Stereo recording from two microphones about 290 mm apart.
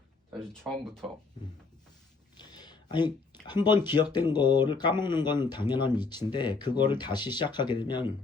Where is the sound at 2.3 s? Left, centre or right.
Centre.